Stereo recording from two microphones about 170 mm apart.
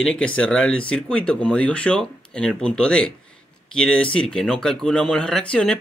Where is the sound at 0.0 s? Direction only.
5° left (ahead or behind).